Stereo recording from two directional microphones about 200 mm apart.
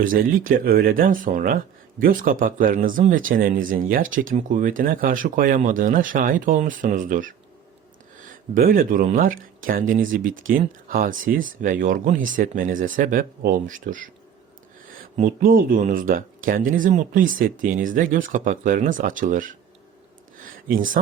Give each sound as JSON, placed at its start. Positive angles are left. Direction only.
{"t": 0.0, "sound": "speech", "side_deg": -45}
{"t": 8.5, "sound": "speech", "side_deg": -45}
{"t": 15.1, "sound": "speech", "side_deg": -40}
{"t": 20.4, "sound": "a sound", "side_deg": -45}